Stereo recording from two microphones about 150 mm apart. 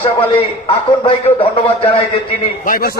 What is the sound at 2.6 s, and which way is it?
Speech, 70° left (ahead or behind).